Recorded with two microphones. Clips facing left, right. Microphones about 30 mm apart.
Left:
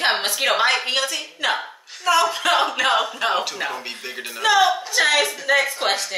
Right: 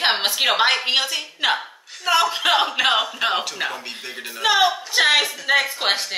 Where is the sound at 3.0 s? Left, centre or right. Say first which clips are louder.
Even; centre.